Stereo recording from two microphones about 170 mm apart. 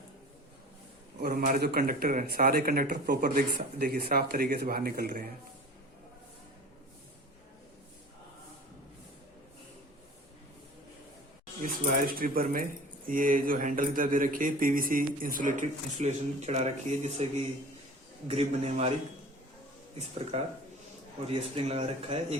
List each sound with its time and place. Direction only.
1.2 s speech: 60° right (ahead or behind)
11.6 s speech: 55° right (ahead or behind); by 17.2 s 40° right (ahead or behind)
18.3 s speech: 35° right (ahead or behind)
20.3 s speech: 40° right (ahead or behind)